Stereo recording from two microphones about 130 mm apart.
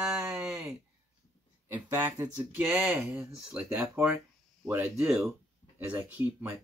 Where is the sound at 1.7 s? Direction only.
15° right (ahead or behind).